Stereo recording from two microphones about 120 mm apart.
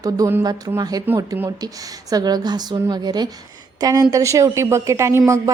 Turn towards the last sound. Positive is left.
turn(degrees=-25)  # may be behind; listen again after turning